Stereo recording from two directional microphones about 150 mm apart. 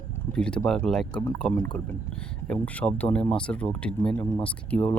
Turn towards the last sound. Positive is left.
turn(degrees=10)  # may be behind; listen again after turning